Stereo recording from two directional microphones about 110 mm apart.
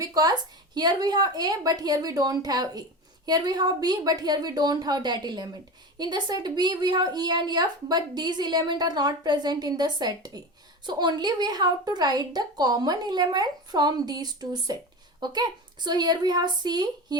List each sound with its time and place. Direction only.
0.0 s a woman's voice: 35° right (ahead or behind)